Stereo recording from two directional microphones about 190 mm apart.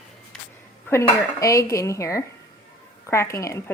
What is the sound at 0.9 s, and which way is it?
Dishes, 10° left (ahead or behind).